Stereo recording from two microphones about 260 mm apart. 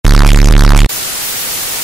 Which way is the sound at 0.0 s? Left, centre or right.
Centre.